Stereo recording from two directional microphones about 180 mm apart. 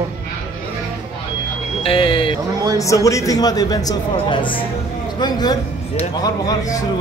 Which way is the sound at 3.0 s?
20° left (ahead or behind).